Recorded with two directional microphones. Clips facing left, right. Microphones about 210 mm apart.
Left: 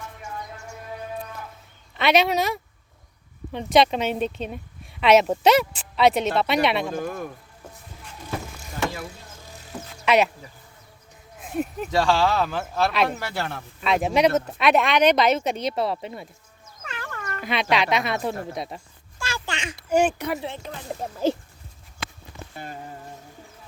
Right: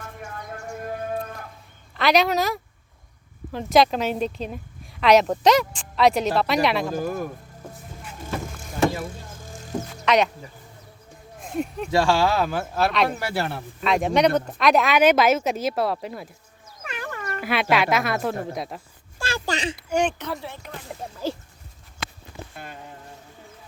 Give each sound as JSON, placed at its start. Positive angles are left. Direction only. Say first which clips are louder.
{"t": 0.2, "sound": "music", "louder": "right 3 dB", "side_deg": -50}
{"t": 2.0, "sound": "speech", "louder": "even", "side_deg": 0}
{"t": 9.7, "sound": "speech", "louder": "right 8 dB", "side_deg": -40}
{"t": 11.3, "sound": "a sound", "louder": "even", "side_deg": 5}
{"t": 11.9, "sound": "speech", "louder": "right 1 dB", "side_deg": -10}
{"t": 12.9, "sound": "speech", "louder": "right 1 dB", "side_deg": 0}
{"t": 13.1, "sound": "speech", "louder": "right 3 dB", "side_deg": -10}
{"t": 13.8, "sound": "speech", "louder": "even", "side_deg": 0}
{"t": 16.8, "sound": "speech", "louder": "right 3 dB", "side_deg": -15}
{"t": 19.2, "sound": "speech", "louder": "right 5 dB", "side_deg": -35}
{"t": 19.7, "sound": "speech", "louder": "left 6 dB", "side_deg": 5}
{"t": 22.4, "sound": "a sound", "louder": "right 2 dB", "side_deg": -35}